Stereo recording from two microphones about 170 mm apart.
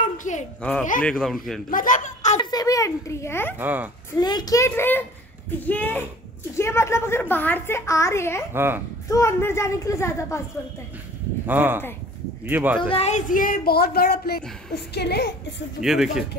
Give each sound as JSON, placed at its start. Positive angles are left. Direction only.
{"t": 0.0, "sound": "a sound", "side_deg": 45}
{"t": 0.6, "sound": "a woman's voice", "side_deg": 5}
{"t": 1.7, "sound": "a child's voice", "side_deg": 50}
{"t": 2.3, "sound": "a child's voice", "side_deg": 20}
{"t": 3.5, "sound": "speech", "side_deg": -10}
{"t": 4.2, "sound": "a child's voice", "side_deg": 25}
{"t": 8.5, "sound": "speech", "side_deg": -15}
{"t": 9.1, "sound": "a woman's voice", "side_deg": 15}
{"t": 11.4, "sound": "speech", "side_deg": -10}
{"t": 12.8, "sound": "a woman's voice", "side_deg": 35}
{"t": 15.8, "sound": "a man's voice", "side_deg": 0}